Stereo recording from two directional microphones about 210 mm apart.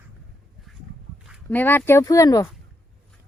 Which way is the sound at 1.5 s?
10° left (ahead or behind).